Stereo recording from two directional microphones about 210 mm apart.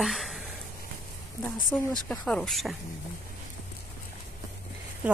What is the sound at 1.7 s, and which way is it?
Speech, 10° left (ahead or behind).